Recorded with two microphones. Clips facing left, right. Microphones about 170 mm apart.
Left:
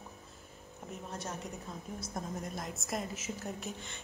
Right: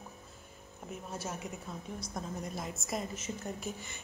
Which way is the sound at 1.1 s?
5° right (ahead or behind).